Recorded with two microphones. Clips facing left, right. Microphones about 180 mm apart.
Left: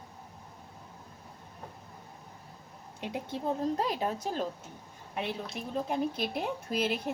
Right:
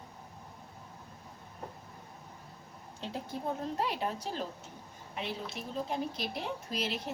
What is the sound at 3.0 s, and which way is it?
Speech, 15° left (ahead or behind).